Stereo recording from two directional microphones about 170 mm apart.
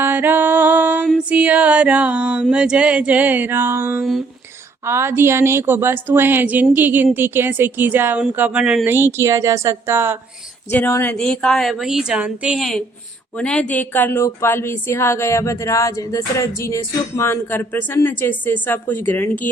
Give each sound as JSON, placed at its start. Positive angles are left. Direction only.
{"t": 0.0, "sound": "music", "side_deg": -10}
{"t": 1.3, "sound": "a woman's voice", "side_deg": -10}
{"t": 10.7, "sound": "a woman's voice", "side_deg": 15}